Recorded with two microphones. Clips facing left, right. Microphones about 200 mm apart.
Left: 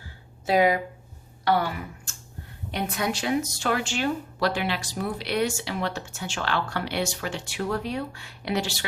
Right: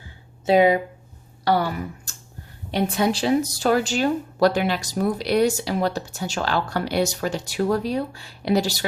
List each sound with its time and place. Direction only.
0.4 s speech: 25° right (ahead or behind)
1.5 s speech: 40° right (ahead or behind)